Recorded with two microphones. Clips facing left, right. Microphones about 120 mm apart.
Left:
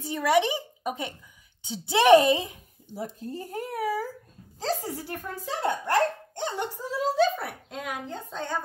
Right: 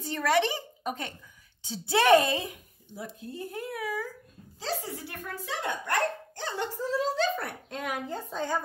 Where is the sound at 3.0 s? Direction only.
40° left (ahead or behind).